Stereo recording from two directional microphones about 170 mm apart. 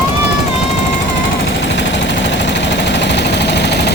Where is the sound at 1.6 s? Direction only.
90° left.